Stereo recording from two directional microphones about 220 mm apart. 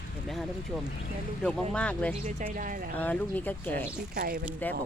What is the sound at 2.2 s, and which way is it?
Speech, 35° right (ahead or behind).